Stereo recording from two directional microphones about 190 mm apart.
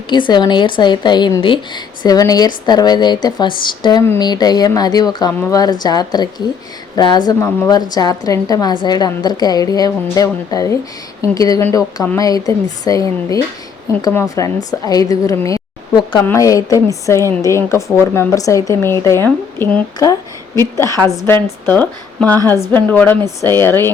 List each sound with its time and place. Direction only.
0.1 s a woman's voice: 25° left (ahead or behind)